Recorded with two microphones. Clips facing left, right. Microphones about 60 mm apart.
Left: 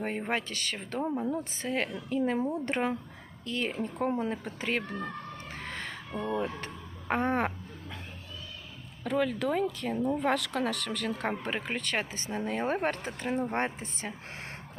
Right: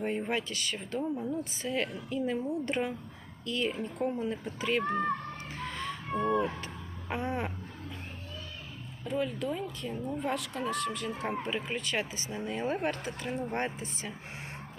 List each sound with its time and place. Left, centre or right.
0.3 s speech: left
1.0 s a woman's voice: left
5.5 s a sound: left
6.1 s speech: right
7.1 s speech: left
9.0 s speech: left
11.3 s speech: left
13.4 s a woman's voice: left